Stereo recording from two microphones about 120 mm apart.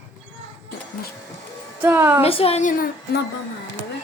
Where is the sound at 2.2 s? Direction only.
55° left (ahead or behind); by 2.7 s 75° left (ahead or behind).